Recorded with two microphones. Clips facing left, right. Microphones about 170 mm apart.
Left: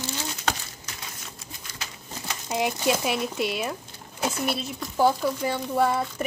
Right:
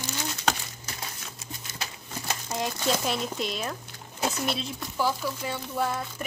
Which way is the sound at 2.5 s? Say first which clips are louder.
Left 4 dB; 15° left (ahead or behind).